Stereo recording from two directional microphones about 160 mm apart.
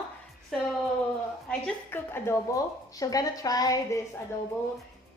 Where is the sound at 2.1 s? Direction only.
15° left (ahead or behind).